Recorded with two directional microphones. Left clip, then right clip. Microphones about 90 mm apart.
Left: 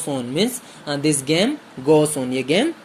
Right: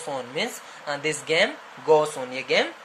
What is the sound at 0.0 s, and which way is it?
Speech, 55° left (ahead or behind).